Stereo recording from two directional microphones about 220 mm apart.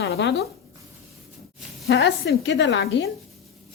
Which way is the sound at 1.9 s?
50° left (ahead or behind).